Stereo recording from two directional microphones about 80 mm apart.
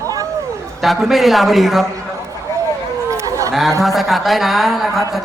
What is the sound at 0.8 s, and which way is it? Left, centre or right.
A man's voice, centre.